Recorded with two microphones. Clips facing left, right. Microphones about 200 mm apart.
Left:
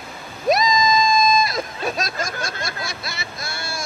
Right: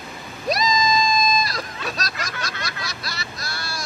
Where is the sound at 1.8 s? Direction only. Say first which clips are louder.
Left 5 dB; 50° left (ahead or behind).